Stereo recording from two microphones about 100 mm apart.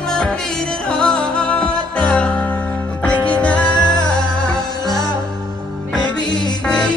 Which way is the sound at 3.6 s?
45° left (ahead or behind).